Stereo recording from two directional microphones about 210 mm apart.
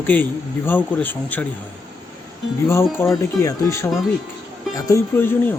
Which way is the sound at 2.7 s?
15° left (ahead or behind).